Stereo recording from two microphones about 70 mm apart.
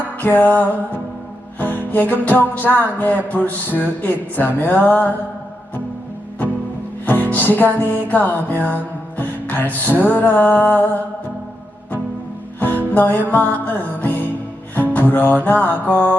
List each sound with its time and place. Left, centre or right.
0.2 s music: left
7.0 s music: left
12.5 s music: left
14.8 s speech: left
15.4 s music: left